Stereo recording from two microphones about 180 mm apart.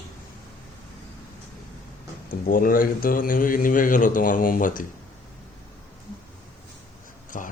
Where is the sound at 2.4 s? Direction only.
50° left (ahead or behind).